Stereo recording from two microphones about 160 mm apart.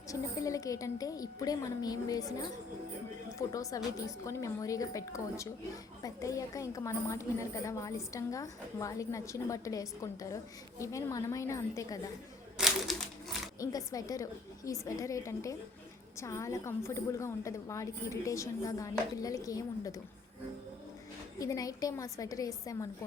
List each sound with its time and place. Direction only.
0.1 s a woman's voice: 20° left (ahead or behind)
3.3 s a woman's voice: 20° left (ahead or behind)
12.5 s crumpling: centre (ahead or behind)
13.6 s a woman's voice: 20° left (ahead or behind)
21.3 s a woman's voice: 20° left (ahead or behind)